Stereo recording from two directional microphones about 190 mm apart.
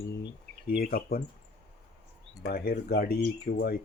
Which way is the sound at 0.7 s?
50° left (ahead or behind).